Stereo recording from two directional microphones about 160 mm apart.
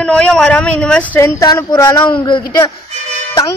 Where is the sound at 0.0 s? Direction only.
5° left (ahead or behind).